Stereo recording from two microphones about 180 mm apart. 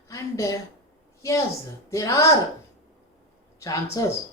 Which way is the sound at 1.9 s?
20° left (ahead or behind).